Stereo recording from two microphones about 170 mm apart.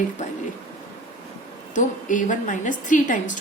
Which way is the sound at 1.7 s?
50° left (ahead or behind).